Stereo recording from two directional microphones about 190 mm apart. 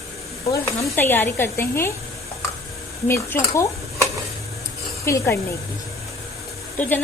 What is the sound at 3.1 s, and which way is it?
Speech, 15° left (ahead or behind).